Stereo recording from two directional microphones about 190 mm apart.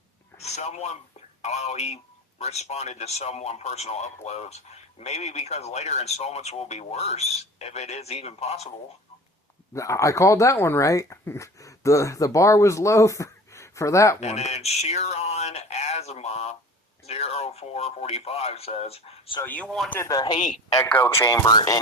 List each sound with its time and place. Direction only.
0.3 s a man's voice: 35° left (ahead or behind)
9.7 s speech: 15° left (ahead or behind)
14.2 s speech: 35° left (ahead or behind)
19.4 s speech: 10° left (ahead or behind)
20.0 s speech: 20° left (ahead or behind)